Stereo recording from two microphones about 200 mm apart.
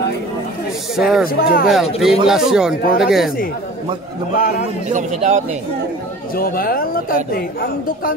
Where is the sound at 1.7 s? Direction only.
Centre (ahead or behind).